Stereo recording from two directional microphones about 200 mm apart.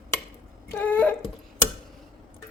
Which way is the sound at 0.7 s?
10° left (ahead or behind).